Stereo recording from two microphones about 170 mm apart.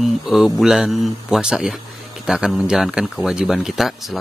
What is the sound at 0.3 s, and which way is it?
Speech, centre (ahead or behind).